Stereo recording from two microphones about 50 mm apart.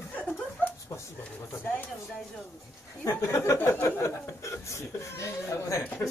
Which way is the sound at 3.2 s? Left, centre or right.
Left.